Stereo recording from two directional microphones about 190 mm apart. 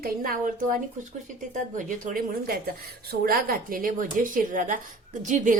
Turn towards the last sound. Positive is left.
turn(degrees=-40)  # may be behind; listen again after turning